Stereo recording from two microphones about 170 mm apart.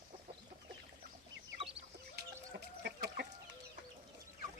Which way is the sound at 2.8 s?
70° right (ahead or behind).